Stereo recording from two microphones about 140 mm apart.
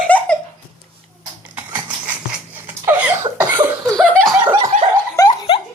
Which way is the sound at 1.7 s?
10° right (ahead or behind).